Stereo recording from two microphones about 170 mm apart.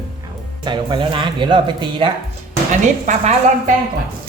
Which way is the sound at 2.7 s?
45° right (ahead or behind).